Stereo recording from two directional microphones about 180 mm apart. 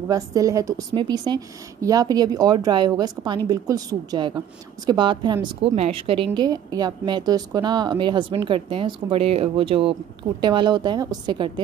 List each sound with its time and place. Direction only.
0.1 s a woman's voice: 20° right (ahead or behind)